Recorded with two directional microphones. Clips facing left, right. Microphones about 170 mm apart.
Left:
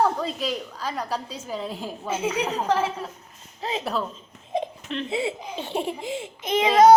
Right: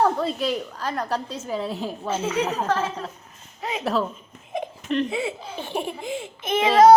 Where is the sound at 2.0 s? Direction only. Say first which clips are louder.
Right 1 dB; 10° left (ahead or behind).